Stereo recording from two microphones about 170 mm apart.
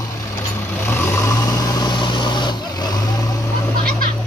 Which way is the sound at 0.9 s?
15° left (ahead or behind).